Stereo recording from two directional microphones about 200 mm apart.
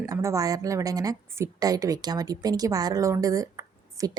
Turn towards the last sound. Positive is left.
turn(degrees=-15)  # may be behind; listen again after turning